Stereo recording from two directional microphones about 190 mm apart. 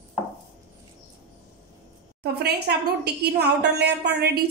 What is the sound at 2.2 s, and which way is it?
A woman's voice, 60° right (ahead or behind).